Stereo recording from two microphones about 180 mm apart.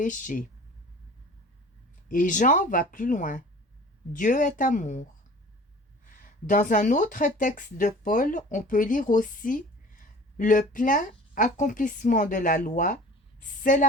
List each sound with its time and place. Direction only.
0.0 s speech: 45° left (ahead or behind)
2.0 s speech: 45° left (ahead or behind)
6.1 s speech: 50° left (ahead or behind)